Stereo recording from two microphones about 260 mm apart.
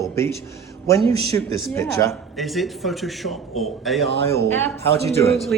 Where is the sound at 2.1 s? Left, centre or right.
Centre.